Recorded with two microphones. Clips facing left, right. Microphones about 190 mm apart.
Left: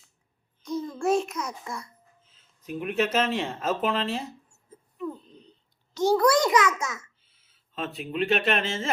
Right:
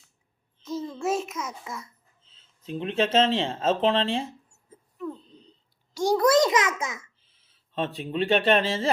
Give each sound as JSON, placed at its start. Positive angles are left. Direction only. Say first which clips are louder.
{"t": 0.9, "sound": "a child's voice", "louder": "left 4 dB", "side_deg": -5}
{"t": 2.2, "sound": "speech", "louder": "even", "side_deg": -25}
{"t": 4.9, "sound": "a sound", "louder": "left 1 dB", "side_deg": 5}
{"t": 5.9, "sound": "a child's voice", "louder": "left 1 dB", "side_deg": -10}
{"t": 6.1, "sound": "a child's voice", "louder": "right 2 dB", "side_deg": -25}
{"t": 7.4, "sound": "speech", "louder": "right 4 dB", "side_deg": -30}